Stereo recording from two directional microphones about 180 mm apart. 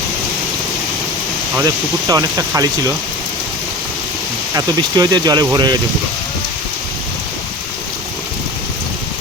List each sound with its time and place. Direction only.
1.6 s speech: 20° right (ahead or behind)
4.5 s speech: 20° right (ahead or behind)